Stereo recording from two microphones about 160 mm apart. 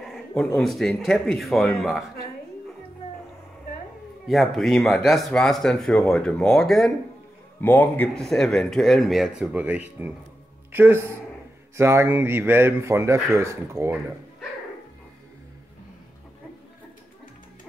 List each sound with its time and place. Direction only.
0.3 s speech: 5° left (ahead or behind)
4.3 s speech: centre (ahead or behind); by 13.9 s 15° right (ahead or behind)